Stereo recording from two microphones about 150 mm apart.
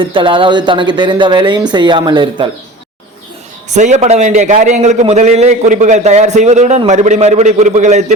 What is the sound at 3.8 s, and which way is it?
A man's voice, 50° right (ahead or behind).